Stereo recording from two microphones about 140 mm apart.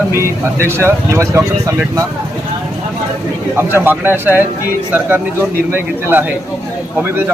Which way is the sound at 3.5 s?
15° right (ahead or behind).